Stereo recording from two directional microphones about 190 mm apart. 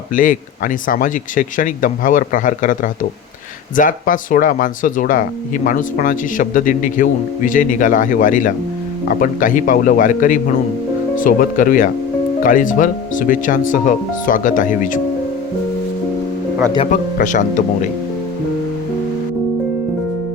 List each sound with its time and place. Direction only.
0.1 s speech: 45° left (ahead or behind)
16.9 s speech: 45° left (ahead or behind)